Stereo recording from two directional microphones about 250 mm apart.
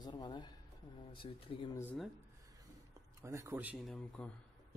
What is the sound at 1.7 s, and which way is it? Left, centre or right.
Speech, centre.